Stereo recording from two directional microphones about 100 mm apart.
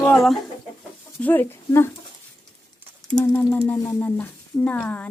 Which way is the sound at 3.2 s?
25° left (ahead or behind).